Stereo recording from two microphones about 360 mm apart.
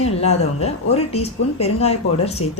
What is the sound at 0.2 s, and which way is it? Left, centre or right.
A woman's voice, centre.